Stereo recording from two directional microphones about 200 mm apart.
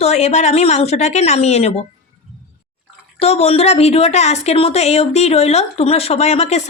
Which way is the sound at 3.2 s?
30° left (ahead or behind).